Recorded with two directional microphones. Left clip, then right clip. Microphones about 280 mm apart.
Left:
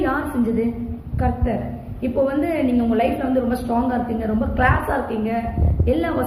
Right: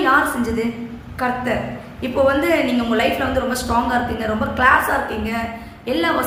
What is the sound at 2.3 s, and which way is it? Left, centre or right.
A woman's voice, centre.